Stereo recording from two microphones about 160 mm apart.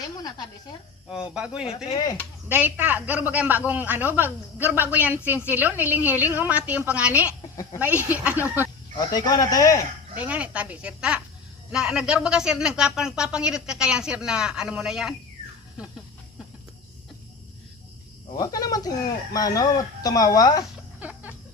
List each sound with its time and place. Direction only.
0.2 s a sound: 25° left (ahead or behind)
1.1 s a woman's voice: 5° right (ahead or behind)
1.9 s speech: 25° left (ahead or behind)
2.5 s a woman's voice: 10° right (ahead or behind)
7.5 s speech: 20° left (ahead or behind)
7.8 s a woman's voice: 10° right (ahead or behind)
9.0 s speech: 25° left (ahead or behind)
10.2 s a woman's voice: 10° right (ahead or behind)
18.3 s speech: 20° left (ahead or behind)
21.0 s music: 10° right (ahead or behind)